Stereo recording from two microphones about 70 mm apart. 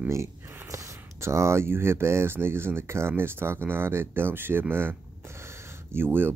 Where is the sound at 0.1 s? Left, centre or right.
Right.